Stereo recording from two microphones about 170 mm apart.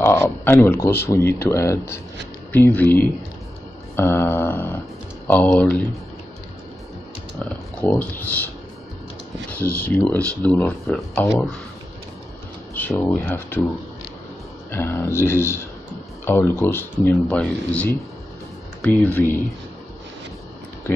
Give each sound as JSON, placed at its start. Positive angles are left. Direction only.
{"t": 0.0, "sound": "speech", "side_deg": 15}
{"t": 7.8, "sound": "speech", "side_deg": 10}
{"t": 10.0, "sound": "speech", "side_deg": 5}
{"t": 12.7, "sound": "speech", "side_deg": 10}
{"t": 14.7, "sound": "speech", "side_deg": 15}